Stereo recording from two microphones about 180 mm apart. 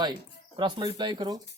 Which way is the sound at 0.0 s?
25° right (ahead or behind).